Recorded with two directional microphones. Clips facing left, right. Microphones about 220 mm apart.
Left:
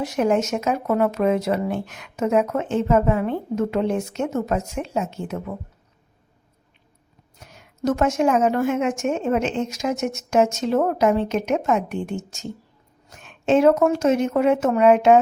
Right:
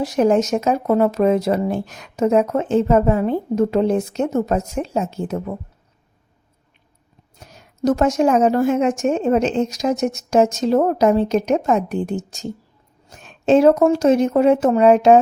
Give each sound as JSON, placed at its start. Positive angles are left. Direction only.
{"t": 0.0, "sound": "speech", "side_deg": -35}
{"t": 7.3, "sound": "speech", "side_deg": -35}